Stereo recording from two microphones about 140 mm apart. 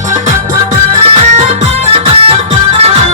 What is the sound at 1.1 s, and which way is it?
Music, 50° right (ahead or behind).